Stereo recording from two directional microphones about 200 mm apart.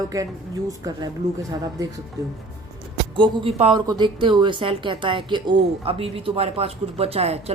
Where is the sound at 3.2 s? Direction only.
25° right (ahead or behind).